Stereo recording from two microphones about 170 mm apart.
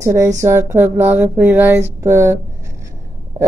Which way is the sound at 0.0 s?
20° right (ahead or behind).